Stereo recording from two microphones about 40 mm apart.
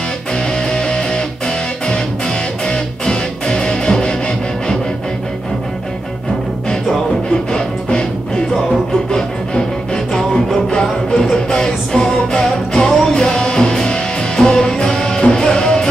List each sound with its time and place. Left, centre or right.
0.7 s music: left
2.6 s music: left
10.7 s music: centre